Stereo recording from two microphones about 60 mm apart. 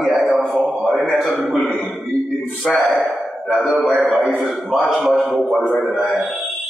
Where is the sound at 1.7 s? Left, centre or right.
Centre.